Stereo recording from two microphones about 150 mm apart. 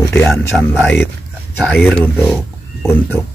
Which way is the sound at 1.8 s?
10° left (ahead or behind).